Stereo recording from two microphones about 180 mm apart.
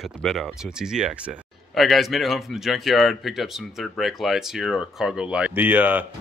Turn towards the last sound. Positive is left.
turn(degrees=-10)  # may be behind; listen again after turning